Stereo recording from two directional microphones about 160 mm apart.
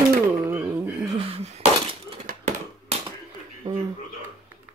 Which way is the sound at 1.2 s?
40° right (ahead or behind).